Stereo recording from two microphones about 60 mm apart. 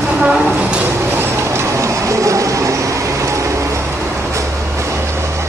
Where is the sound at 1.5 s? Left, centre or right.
Right.